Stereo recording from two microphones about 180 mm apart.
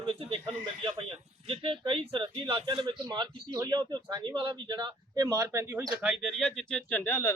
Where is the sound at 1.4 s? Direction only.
30° right (ahead or behind).